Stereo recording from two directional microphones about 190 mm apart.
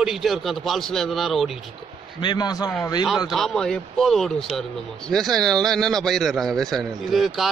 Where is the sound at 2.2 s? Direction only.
25° left (ahead or behind).